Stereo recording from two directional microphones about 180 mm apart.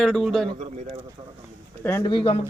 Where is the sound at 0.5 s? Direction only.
40° right (ahead or behind).